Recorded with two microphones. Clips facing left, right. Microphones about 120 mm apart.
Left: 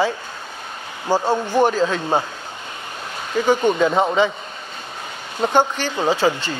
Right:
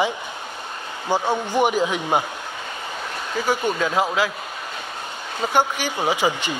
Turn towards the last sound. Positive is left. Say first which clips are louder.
# left 3 dB
turn(degrees=-15)  # may be behind; listen again after turning